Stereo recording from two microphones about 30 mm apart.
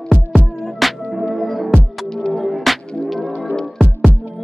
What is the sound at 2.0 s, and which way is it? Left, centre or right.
Music, left.